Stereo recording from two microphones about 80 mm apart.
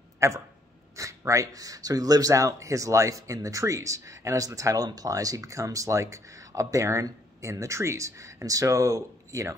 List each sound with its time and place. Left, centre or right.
0.2 s speech: right